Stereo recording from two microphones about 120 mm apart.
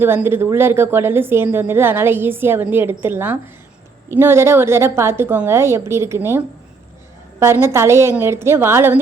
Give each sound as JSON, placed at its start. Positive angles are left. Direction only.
{"t": 0.0, "sound": "a woman's voice", "side_deg": -20}